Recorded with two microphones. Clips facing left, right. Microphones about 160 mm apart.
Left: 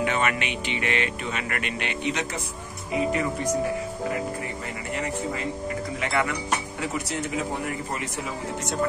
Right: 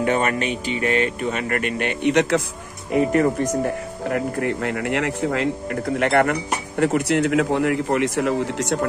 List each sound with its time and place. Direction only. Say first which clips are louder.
0.0 s speech: right 5 dB; 40° right (ahead or behind); by 2.4 s 65° right (ahead or behind)
2.9 s speech: right 7 dB; 55° right (ahead or behind); by 8.7 s 80° right